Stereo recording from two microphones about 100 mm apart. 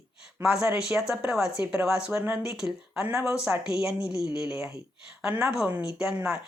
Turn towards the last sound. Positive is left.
turn(degrees=-10)  # may be behind; listen again after turning